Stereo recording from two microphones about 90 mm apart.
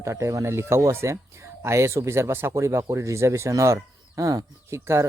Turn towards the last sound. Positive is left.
turn(degrees=-30)  # may be behind; listen again after turning